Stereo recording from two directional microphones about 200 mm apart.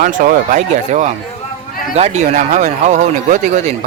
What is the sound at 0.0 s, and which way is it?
Speech, 40° right (ahead or behind).